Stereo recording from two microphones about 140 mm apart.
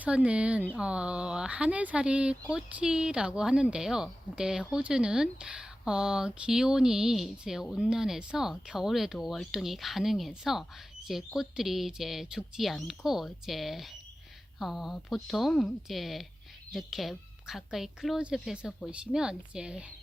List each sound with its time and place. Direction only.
0.0 s speech: 10° right (ahead or behind)